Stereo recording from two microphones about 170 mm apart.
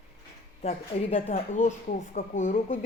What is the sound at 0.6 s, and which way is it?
Speech, 35° left (ahead or behind).